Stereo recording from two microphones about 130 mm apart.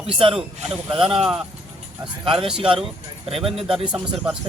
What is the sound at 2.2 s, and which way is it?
Speech, 40° right (ahead or behind).